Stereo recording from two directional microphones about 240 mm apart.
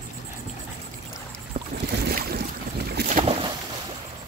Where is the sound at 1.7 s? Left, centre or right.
Right.